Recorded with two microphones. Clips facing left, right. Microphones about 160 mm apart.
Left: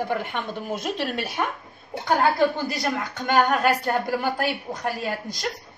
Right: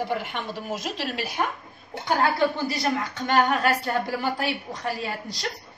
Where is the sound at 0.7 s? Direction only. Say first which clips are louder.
Left 4 dB; 55° left (ahead or behind).